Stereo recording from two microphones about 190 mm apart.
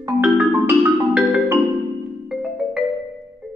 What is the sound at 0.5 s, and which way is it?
Music, 15° right (ahead or behind).